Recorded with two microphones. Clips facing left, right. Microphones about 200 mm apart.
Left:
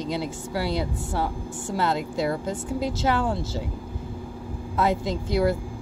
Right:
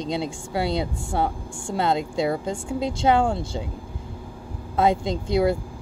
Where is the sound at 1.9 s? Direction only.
25° right (ahead or behind).